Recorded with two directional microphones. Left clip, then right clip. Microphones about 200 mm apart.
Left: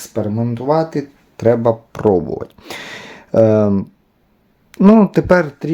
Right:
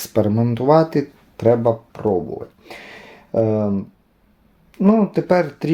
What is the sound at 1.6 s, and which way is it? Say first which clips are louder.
Speech: left 4 dB; 35° left (ahead or behind).